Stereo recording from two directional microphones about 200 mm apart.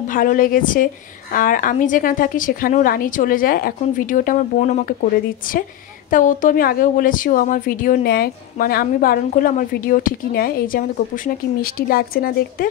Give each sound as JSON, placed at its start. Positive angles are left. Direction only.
{"t": 0.0, "sound": "speech", "side_deg": 40}